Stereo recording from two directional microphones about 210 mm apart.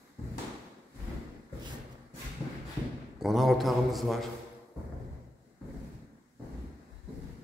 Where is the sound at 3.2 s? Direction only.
Centre (ahead or behind).